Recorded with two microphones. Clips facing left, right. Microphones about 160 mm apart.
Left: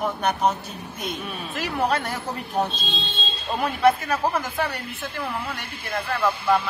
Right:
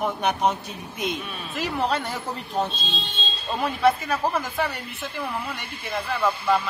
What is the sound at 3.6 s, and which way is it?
Speech, 15° left (ahead or behind).